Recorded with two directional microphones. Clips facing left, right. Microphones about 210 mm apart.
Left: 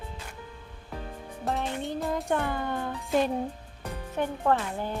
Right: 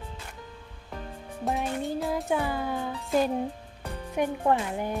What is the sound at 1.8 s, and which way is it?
Speech, centre (ahead or behind).